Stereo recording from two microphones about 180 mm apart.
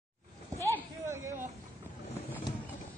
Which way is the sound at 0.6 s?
15° left (ahead or behind).